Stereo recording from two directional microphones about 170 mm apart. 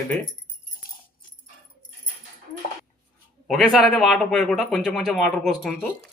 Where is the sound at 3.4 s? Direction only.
Centre (ahead or behind).